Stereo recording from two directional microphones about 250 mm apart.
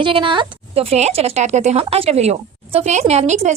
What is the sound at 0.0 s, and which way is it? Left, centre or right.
A woman's voice, centre.